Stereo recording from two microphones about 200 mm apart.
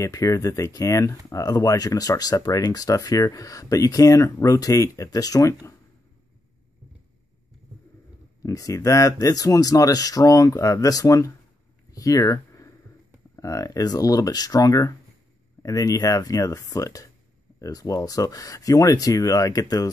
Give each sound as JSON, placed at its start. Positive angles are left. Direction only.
{"t": 0.0, "sound": "speech", "side_deg": 15}
{"t": 8.4, "sound": "speech", "side_deg": 15}